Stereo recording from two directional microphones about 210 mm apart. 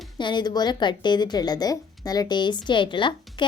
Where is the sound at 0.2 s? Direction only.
20° left (ahead or behind).